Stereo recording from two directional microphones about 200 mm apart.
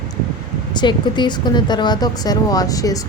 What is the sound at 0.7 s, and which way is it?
A woman's voice, 20° left (ahead or behind).